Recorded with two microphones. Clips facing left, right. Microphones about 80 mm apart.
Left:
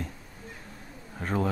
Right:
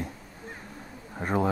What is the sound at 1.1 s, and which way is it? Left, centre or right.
Speech, centre.